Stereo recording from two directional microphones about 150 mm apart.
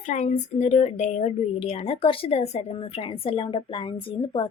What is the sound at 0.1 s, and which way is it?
A woman's voice, 55° left (ahead or behind).